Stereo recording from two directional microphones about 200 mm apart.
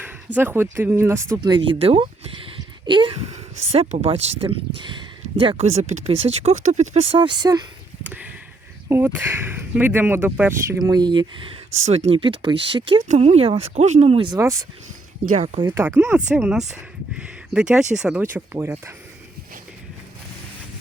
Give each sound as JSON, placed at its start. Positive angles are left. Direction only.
{"t": 0.3, "sound": "speech", "side_deg": -10}
{"t": 8.0, "sound": "speech", "side_deg": -10}
{"t": 10.7, "sound": "speech", "side_deg": -20}
{"t": 14.3, "sound": "speech", "side_deg": -15}